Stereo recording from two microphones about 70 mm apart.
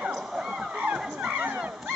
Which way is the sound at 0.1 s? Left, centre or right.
Centre.